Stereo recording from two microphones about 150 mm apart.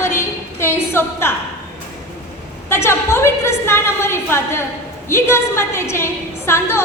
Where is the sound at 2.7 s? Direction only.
15° left (ahead or behind).